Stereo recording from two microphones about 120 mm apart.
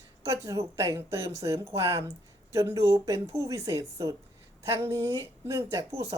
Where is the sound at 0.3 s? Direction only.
25° right (ahead or behind).